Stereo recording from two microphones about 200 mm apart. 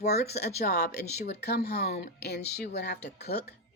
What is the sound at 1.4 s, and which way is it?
A woman's voice, 55° left (ahead or behind).